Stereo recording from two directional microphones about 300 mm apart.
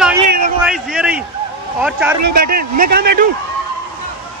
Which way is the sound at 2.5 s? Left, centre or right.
Right.